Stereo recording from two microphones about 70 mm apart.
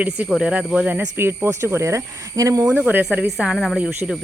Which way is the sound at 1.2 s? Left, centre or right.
Right.